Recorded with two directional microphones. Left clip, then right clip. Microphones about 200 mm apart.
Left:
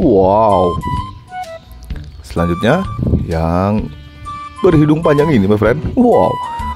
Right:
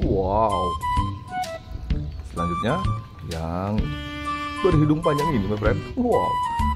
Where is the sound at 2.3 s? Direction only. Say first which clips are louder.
Left 10 dB; 50° left (ahead or behind).